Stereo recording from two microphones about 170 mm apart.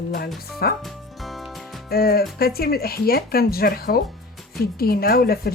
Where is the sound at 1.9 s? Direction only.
65° left (ahead or behind).